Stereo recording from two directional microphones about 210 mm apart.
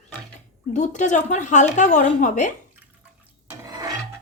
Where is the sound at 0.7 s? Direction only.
35° left (ahead or behind).